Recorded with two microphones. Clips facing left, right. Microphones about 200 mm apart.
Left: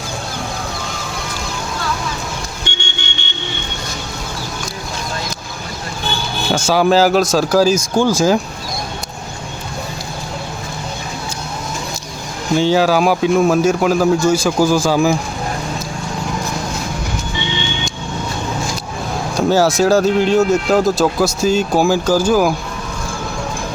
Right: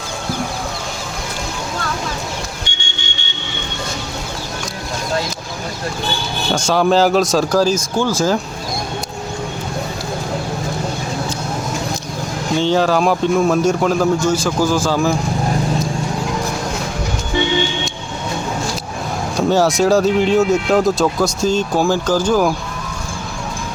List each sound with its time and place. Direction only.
2.7 s vehicle: 55° left (ahead or behind)
6.5 s speech: 5° left (ahead or behind)
12.5 s speech: 5° left (ahead or behind)
19.4 s speech: centre (ahead or behind)